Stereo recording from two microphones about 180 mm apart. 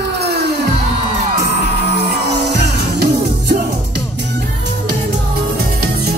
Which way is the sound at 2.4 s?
70° right (ahead or behind).